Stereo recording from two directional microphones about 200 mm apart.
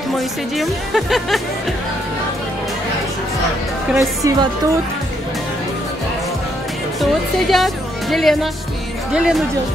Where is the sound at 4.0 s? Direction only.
15° right (ahead or behind).